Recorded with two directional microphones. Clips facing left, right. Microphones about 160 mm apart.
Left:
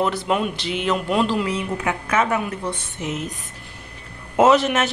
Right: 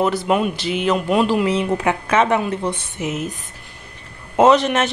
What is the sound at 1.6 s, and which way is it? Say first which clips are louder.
A woman's voice: right 5 dB; 25° right (ahead or behind).